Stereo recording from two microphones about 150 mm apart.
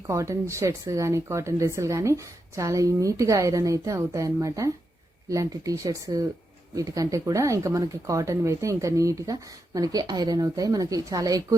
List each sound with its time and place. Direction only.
0.1 s speech: 20° right (ahead or behind)